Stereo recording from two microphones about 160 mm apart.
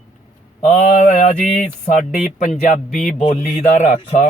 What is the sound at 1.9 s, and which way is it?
Speech, 50° left (ahead or behind).